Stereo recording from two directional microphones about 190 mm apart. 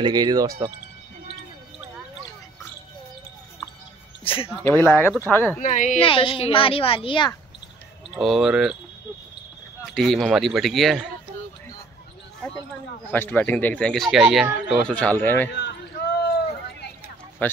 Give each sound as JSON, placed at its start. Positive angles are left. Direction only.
{"t": 0.0, "sound": "speech", "side_deg": -20}
{"t": 4.2, "sound": "speech", "side_deg": 30}
{"t": 4.6, "sound": "speech", "side_deg": 10}
{"t": 5.6, "sound": "a woman's voice", "side_deg": 40}
{"t": 5.9, "sound": "a woman's voice", "side_deg": 30}
{"t": 8.1, "sound": "a man's voice", "side_deg": 0}
{"t": 9.9, "sound": "a man's voice", "side_deg": 0}
{"t": 13.1, "sound": "speech", "side_deg": 10}
{"t": 17.4, "sound": "speech", "side_deg": 10}